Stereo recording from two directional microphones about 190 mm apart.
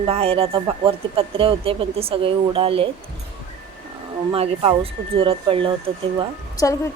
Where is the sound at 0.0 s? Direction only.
30° right (ahead or behind).